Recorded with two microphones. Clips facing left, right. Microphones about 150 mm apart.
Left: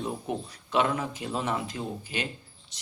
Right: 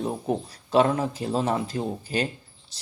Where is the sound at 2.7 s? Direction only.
35° right (ahead or behind).